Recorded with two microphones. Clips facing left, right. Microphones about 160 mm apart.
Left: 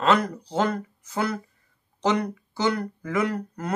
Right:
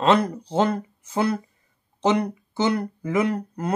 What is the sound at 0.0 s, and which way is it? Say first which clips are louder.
Speech: right 2 dB; 25° right (ahead or behind).